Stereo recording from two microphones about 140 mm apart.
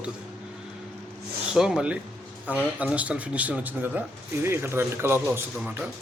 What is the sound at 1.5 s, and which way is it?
Speech, 5° right (ahead or behind).